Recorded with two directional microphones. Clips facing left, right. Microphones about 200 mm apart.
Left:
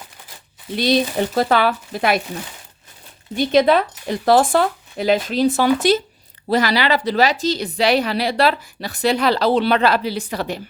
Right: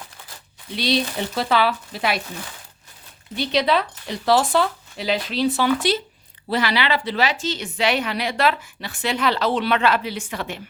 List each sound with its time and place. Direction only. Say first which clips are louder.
0.8 s speech: left 5 dB; 45° left (ahead or behind)
3.3 s a woman's voice: left 6 dB; 50° left (ahead or behind)